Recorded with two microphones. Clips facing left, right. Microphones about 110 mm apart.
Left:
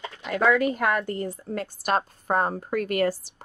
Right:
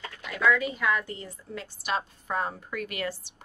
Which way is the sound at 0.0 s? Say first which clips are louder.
Left 4 dB; 25° left (ahead or behind).